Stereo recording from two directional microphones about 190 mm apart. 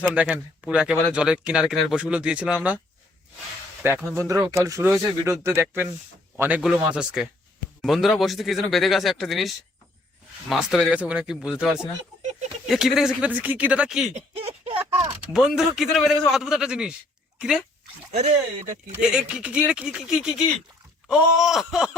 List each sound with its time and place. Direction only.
0.1 s speech: 5° right (ahead or behind)
3.8 s speech: 10° right (ahead or behind)
14.1 s a sound: 30° right (ahead or behind)
15.3 s speech: centre (ahead or behind)
18.2 s speech: 35° right (ahead or behind)
18.9 s speech: 5° right (ahead or behind)